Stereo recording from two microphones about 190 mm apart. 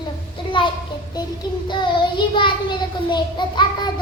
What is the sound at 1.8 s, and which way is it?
Child singing, 25° left (ahead or behind).